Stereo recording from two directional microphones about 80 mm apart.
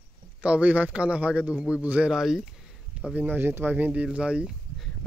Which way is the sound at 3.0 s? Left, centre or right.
Centre.